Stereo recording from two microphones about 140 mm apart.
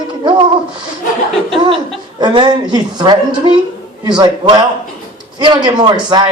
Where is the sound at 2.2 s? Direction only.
30° right (ahead or behind).